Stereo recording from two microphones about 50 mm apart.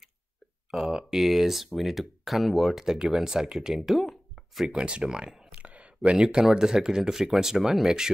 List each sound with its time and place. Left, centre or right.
0.7 s speech: centre
4.6 s speech: centre
5.6 s a sound: right
6.5 s speech: centre